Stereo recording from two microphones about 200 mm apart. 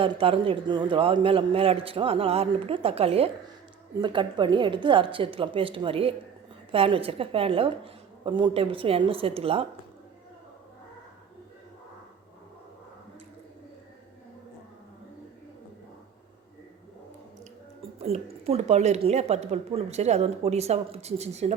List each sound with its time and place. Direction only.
0.0 s a man's voice: 25° right (ahead or behind)
18.0 s a woman's voice: 30° right (ahead or behind)